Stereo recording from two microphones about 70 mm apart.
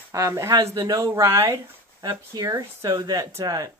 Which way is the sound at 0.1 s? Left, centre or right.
Right.